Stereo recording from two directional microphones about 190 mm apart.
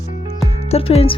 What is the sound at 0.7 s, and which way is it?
Speech, 30° left (ahead or behind).